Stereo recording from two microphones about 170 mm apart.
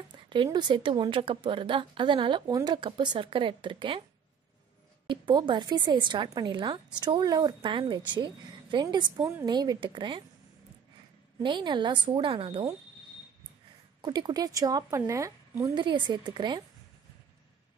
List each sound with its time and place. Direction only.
0.1 s a woman's voice: 30° right (ahead or behind)
5.0 s a woman's voice: 30° right (ahead or behind)
11.4 s a woman's voice: 30° right (ahead or behind)
14.0 s a woman's voice: 25° right (ahead or behind)